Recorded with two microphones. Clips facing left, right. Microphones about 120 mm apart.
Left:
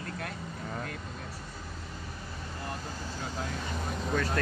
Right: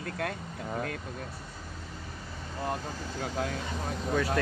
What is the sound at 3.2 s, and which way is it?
Speech, 60° right (ahead or behind).